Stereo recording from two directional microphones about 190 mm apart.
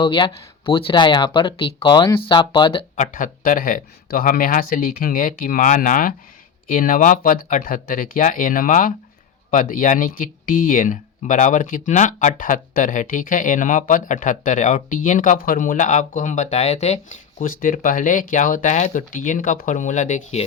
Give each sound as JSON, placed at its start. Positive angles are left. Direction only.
{"t": 0.0, "sound": "speech", "side_deg": 25}
{"t": 2.9, "sound": "speech", "side_deg": 40}